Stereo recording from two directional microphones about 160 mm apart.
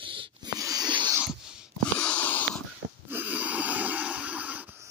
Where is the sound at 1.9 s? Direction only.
10° left (ahead or behind).